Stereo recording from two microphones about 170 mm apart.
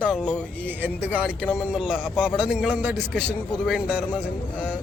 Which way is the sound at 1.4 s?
15° left (ahead or behind).